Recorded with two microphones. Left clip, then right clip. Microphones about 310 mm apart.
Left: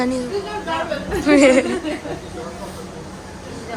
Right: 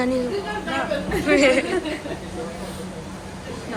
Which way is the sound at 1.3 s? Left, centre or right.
Centre.